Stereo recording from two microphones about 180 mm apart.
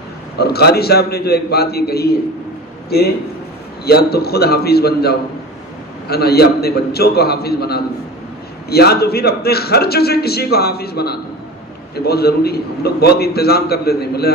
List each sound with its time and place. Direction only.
0.4 s a man's voice: 60° left (ahead or behind)
3.8 s a man's voice: 60° left (ahead or behind)